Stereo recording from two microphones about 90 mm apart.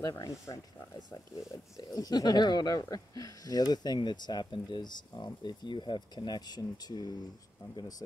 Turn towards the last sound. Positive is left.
turn(degrees=55)  # may be behind; listen again after turning